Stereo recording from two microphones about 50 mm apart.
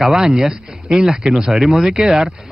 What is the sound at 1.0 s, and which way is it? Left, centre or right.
Speech, centre.